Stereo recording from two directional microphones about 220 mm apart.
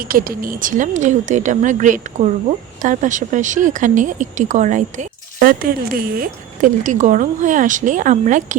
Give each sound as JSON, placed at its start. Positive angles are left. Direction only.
{"t": 0.0, "sound": "speech", "side_deg": -40}